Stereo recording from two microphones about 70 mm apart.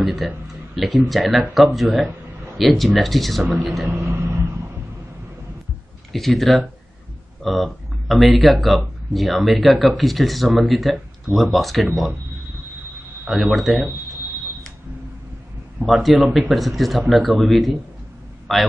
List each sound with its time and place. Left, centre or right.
0.0 s speech: centre
4.0 s vehicle: right
6.1 s speech: centre
13.3 s speech: centre
15.9 s speech: centre